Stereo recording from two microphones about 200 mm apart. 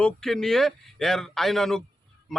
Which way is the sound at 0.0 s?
Centre (ahead or behind).